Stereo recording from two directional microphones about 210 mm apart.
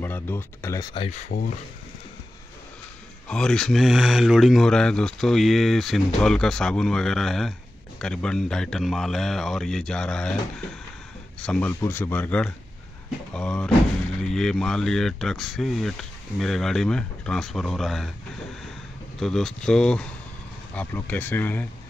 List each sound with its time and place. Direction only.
0.0 s speech: 10° left (ahead or behind)
0.9 s speech: 30° left (ahead or behind)
3.3 s speech: 5° left (ahead or behind)
11.4 s speech: 5° left (ahead or behind)
19.1 s speech: centre (ahead or behind)